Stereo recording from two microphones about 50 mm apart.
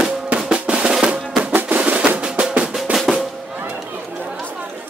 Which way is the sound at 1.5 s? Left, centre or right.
Right.